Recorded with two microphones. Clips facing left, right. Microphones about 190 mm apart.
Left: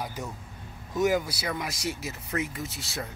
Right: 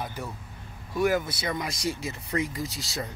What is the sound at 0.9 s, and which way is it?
Speech, 15° left (ahead or behind).